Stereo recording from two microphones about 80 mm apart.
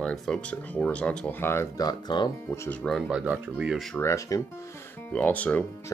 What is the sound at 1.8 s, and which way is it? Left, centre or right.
Speech, left.